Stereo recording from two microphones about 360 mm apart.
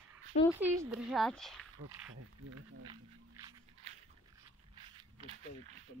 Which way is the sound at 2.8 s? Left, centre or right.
Centre.